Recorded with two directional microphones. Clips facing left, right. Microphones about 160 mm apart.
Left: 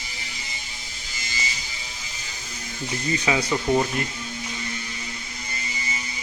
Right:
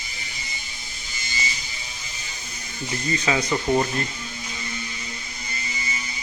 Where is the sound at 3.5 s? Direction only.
5° right (ahead or behind).